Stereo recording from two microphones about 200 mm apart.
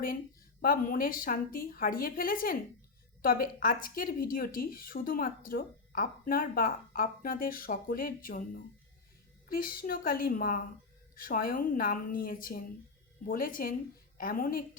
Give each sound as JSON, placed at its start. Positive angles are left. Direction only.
{"t": 0.6, "sound": "a woman's voice", "side_deg": 45}